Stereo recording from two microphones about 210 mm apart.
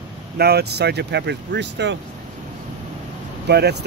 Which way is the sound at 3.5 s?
50° right (ahead or behind).